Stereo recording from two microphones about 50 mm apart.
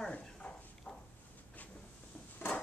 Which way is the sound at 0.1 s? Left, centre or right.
Left.